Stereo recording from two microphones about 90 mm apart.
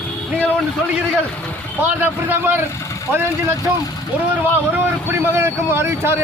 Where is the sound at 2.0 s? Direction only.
20° right (ahead or behind).